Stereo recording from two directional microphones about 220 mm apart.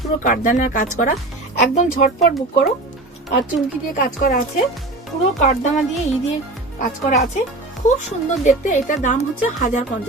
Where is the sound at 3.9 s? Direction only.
40° left (ahead or behind).